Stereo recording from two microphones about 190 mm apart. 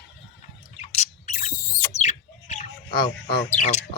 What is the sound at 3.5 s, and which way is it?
Speech, 40° left (ahead or behind).